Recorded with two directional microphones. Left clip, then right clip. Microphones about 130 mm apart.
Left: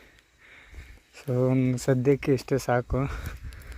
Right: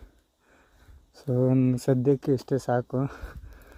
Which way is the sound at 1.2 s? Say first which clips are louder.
Right 1 dB; 45° right (ahead or behind).